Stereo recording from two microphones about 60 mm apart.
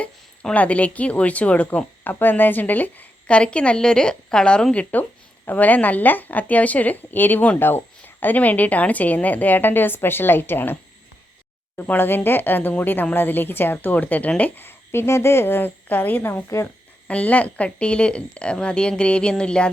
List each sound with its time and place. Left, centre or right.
0.5 s a woman's voice: left
2.0 s a woman's voice: left
11.8 s a woman's voice: left; by 19.7 s centre